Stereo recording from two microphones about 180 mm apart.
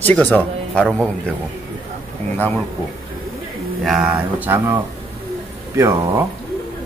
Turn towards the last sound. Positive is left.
turn(degrees=-15)  # may be behind; listen again after turning